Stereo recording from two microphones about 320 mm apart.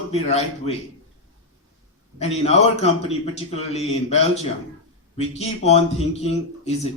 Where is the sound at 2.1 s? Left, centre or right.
Centre.